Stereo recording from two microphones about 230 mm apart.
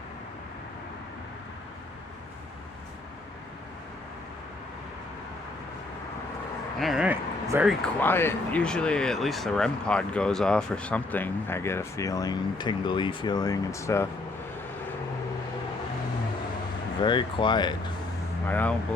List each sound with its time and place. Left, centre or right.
6.7 s speech: centre
7.7 s speech: centre
17.0 s speech: centre
18.4 s speech: centre